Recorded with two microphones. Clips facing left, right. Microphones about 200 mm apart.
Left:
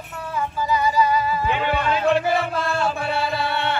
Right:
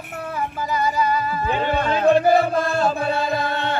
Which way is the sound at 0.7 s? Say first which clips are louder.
Left 2 dB; 50° right (ahead or behind).